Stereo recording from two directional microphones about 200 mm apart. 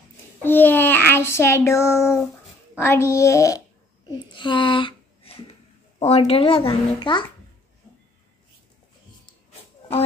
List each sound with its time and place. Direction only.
0.4 s a child's voice: 10° left (ahead or behind)